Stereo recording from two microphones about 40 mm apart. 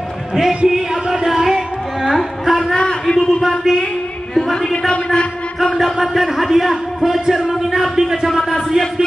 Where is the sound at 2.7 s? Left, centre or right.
Left.